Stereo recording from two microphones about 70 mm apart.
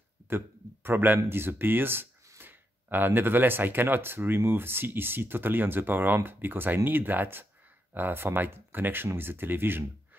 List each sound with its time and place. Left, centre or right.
0.8 s speech: right